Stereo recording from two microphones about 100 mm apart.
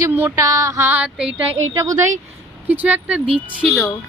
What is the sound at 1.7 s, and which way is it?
Speech, 35° right (ahead or behind).